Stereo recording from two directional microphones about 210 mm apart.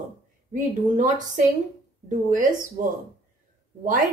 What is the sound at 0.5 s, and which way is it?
A woman's voice, 35° right (ahead or behind).